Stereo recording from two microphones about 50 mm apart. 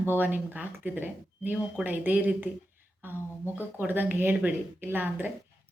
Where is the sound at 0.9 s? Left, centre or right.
Right.